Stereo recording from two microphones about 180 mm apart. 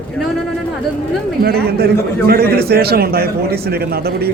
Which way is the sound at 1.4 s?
60° right (ahead or behind).